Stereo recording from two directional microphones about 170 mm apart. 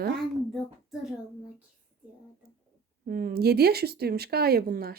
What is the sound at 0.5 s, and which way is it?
Child singing, centre (ahead or behind).